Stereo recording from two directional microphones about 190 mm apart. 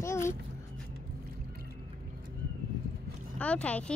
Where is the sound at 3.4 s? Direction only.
5° left (ahead or behind).